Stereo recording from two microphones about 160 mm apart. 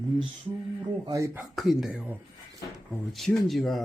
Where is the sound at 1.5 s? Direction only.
Centre (ahead or behind).